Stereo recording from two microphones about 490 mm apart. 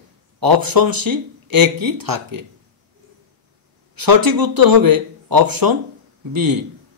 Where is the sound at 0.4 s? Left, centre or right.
Right.